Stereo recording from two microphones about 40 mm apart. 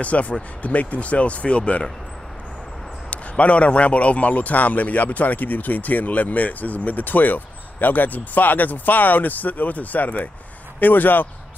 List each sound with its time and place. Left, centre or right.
0.0 s speech: left
3.1 s a man's voice: left